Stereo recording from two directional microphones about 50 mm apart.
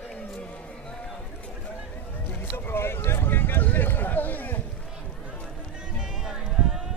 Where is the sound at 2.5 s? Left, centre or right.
Left.